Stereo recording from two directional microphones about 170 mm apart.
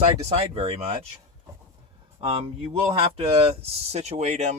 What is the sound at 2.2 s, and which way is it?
Speech, 35° right (ahead or behind).